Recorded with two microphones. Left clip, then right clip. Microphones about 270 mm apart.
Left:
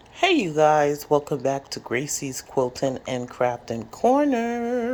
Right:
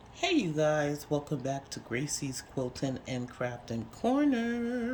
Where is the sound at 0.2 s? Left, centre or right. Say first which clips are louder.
Left 9 dB; left.